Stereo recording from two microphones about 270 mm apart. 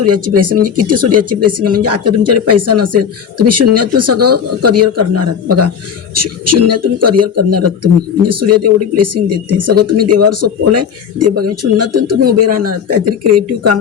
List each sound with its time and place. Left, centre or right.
0.0 s speech: right